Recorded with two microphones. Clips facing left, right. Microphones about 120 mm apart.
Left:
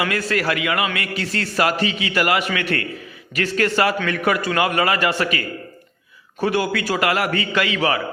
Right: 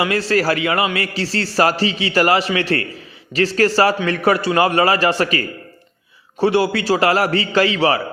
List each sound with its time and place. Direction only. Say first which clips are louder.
0.0 s a man's voice: right 4 dB; 30° right (ahead or behind)
6.4 s a man's voice: right 4 dB; 30° right (ahead or behind)